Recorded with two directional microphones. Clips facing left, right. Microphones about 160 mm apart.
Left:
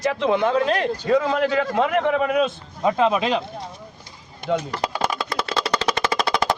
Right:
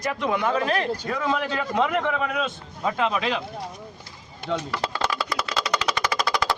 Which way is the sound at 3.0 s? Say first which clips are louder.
Left 5 dB; 20° left (ahead or behind).